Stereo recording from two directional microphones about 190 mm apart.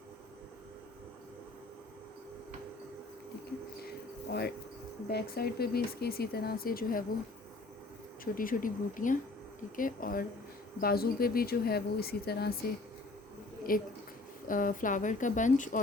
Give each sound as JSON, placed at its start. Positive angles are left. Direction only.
{"t": 4.3, "sound": "speech", "side_deg": 60}
{"t": 8.2, "sound": "speech", "side_deg": 45}
{"t": 13.7, "sound": "speech", "side_deg": 50}